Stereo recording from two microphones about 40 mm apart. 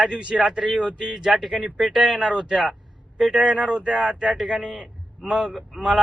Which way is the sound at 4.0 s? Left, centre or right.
Centre.